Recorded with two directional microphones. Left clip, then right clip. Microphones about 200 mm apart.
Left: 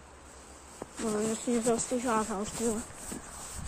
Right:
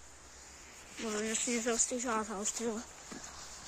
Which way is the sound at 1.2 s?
Centre (ahead or behind).